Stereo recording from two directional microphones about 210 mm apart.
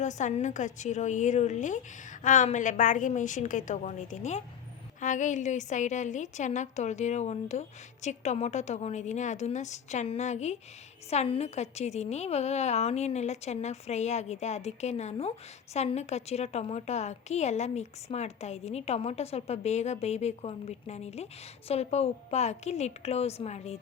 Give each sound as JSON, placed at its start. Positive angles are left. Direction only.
{"t": 0.0, "sound": "a woman's voice", "side_deg": 35}